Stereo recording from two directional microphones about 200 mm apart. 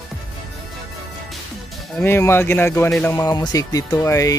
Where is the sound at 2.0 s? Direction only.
10° left (ahead or behind).